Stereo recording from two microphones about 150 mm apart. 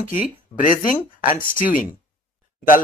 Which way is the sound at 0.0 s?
60° left (ahead or behind).